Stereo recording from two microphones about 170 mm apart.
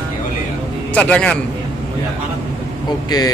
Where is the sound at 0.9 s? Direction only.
5° left (ahead or behind).